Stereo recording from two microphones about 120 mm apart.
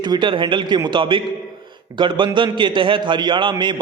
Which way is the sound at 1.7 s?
40° right (ahead or behind).